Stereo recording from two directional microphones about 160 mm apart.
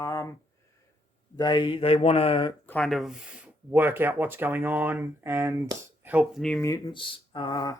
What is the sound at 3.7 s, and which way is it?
Speech, 15° right (ahead or behind).